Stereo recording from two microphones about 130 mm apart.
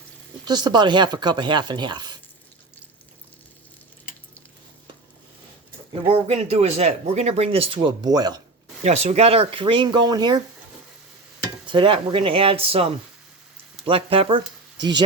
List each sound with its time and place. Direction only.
0.4 s speech: 30° right (ahead or behind)
5.9 s speech: 45° right (ahead or behind); by 8.4 s 30° right (ahead or behind)
8.8 s speech: 60° right (ahead or behind); by 10.4 s 30° right (ahead or behind)
11.6 s speech: 40° right (ahead or behind)